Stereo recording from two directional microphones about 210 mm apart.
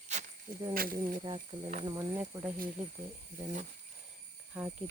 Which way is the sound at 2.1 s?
10° right (ahead or behind).